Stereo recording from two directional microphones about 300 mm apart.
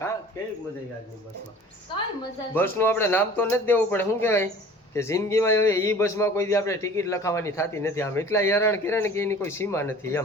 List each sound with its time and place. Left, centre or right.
1.9 s a man's voice: centre